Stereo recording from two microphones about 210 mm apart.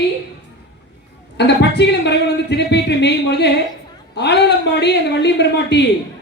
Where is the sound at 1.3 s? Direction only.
55° left (ahead or behind).